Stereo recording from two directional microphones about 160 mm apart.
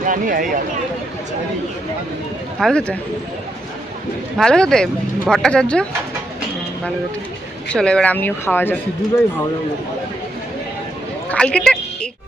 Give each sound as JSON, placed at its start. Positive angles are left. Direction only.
{"t": 0.0, "sound": "speech", "side_deg": -55}
{"t": 2.6, "sound": "speech", "side_deg": 5}
{"t": 4.4, "sound": "speech", "side_deg": 5}
{"t": 7.7, "sound": "speech", "side_deg": 5}
{"t": 11.3, "sound": "speech", "side_deg": 5}